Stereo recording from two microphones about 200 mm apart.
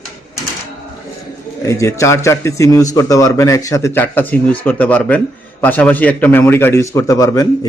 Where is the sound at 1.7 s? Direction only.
15° left (ahead or behind).